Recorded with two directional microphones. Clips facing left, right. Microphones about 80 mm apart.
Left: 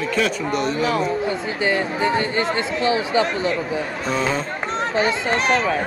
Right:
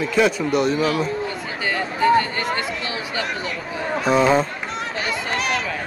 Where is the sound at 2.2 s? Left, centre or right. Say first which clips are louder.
Left 3 dB; left.